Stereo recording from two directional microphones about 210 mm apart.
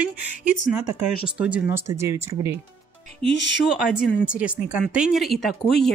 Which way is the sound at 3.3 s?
55° left (ahead or behind).